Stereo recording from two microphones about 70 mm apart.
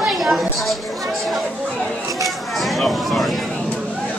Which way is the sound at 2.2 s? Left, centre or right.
Centre.